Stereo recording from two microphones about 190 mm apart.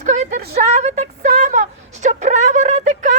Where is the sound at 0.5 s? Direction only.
35° right (ahead or behind).